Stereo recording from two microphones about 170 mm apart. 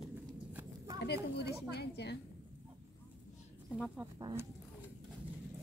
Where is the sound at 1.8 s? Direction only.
80° left.